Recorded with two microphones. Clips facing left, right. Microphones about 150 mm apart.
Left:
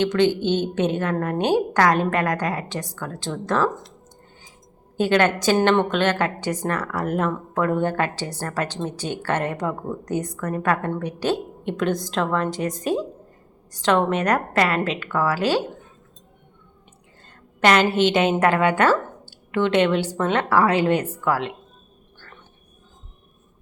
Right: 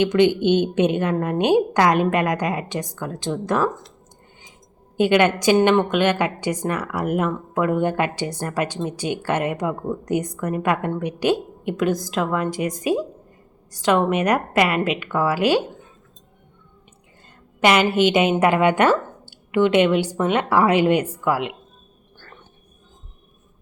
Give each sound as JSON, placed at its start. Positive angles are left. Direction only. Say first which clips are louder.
{"t": 0.0, "sound": "speech", "louder": "right 3 dB", "side_deg": -15}
{"t": 4.9, "sound": "speech", "louder": "right 2 dB", "side_deg": -15}
{"t": 17.6, "sound": "a woman's voice", "louder": "right 1 dB", "side_deg": -10}